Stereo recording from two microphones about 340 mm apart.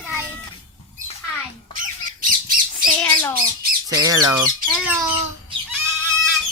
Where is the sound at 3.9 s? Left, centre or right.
Centre.